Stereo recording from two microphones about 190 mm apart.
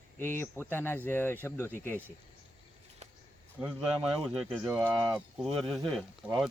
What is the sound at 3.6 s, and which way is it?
Speech, 5° right (ahead or behind).